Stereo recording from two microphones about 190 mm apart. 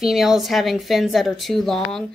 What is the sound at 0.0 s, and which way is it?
Speech, centre (ahead or behind).